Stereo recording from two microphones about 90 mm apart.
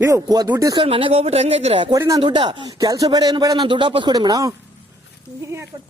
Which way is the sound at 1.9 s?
40° right (ahead or behind).